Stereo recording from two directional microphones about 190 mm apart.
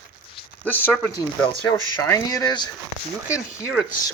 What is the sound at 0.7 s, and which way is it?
Speech, 10° left (ahead or behind).